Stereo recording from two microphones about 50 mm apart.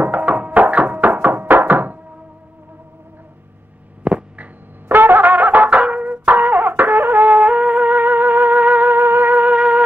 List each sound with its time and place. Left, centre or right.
0.0 s music: right
4.0 s a sound: right
4.8 s music: right